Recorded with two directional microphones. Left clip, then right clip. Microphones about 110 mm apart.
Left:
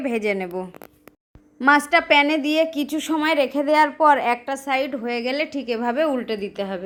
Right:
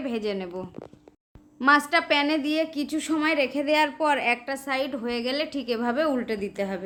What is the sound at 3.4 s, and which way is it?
A woman's voice, 35° left (ahead or behind).